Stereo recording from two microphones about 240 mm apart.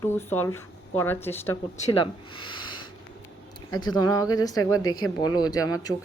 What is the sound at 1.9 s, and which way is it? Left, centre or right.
Speech, centre.